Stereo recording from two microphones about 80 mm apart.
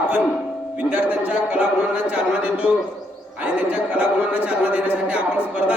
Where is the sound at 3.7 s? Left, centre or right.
Centre.